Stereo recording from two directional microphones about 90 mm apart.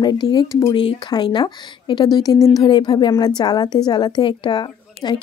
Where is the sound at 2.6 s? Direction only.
55° left (ahead or behind).